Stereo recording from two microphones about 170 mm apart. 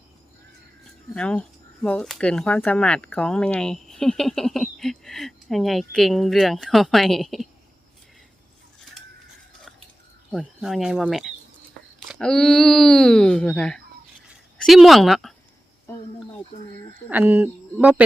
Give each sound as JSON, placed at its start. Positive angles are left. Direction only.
{"t": 1.1, "sound": "speech", "side_deg": 5}
{"t": 10.3, "sound": "speech", "side_deg": 0}
{"t": 17.1, "sound": "speech", "side_deg": -10}